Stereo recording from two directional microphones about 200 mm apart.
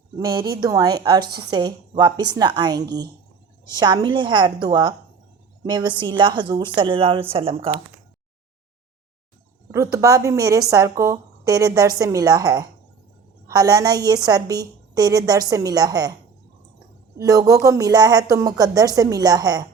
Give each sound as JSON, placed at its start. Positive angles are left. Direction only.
{"t": 0.5, "sound": "a woman's voice", "side_deg": -20}
{"t": 9.7, "sound": "a woman's voice", "side_deg": -15}
{"t": 17.2, "sound": "a woman's voice", "side_deg": -15}